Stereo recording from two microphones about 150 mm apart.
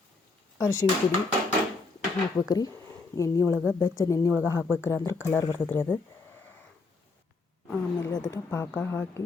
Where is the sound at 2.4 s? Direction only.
25° left (ahead or behind).